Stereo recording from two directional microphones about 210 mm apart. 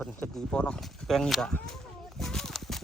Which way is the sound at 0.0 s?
5° left (ahead or behind).